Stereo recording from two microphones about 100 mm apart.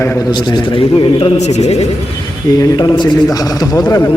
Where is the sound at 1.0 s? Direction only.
80° left.